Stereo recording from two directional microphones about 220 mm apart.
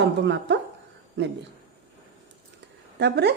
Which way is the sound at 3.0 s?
50° right (ahead or behind).